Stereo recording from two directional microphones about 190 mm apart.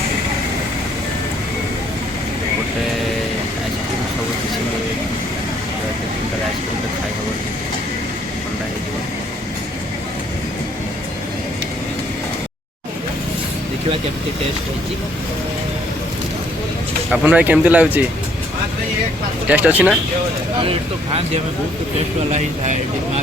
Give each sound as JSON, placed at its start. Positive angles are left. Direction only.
{"t": 17.1, "sound": "speech", "side_deg": -10}
{"t": 19.5, "sound": "speech", "side_deg": -10}
{"t": 20.6, "sound": "speech", "side_deg": -30}